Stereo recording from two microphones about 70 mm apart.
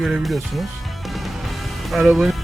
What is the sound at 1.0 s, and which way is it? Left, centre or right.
Music, centre.